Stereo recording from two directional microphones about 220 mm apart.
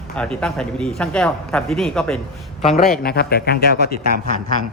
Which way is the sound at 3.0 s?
45° left (ahead or behind).